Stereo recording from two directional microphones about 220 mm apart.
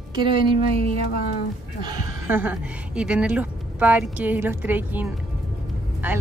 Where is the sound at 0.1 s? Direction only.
20° right (ahead or behind).